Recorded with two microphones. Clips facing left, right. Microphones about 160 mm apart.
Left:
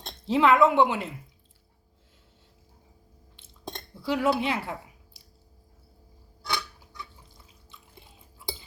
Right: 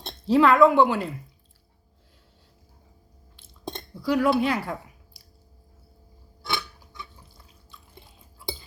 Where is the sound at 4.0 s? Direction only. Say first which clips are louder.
Right 4 dB; 20° left (ahead or behind).